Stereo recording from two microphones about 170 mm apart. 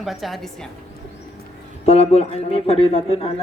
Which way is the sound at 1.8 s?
35° left (ahead or behind).